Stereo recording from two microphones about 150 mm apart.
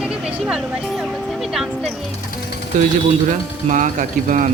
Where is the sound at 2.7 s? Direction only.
60° right (ahead or behind).